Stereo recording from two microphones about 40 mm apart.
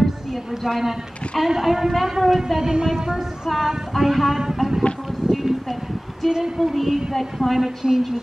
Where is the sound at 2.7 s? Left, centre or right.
Centre.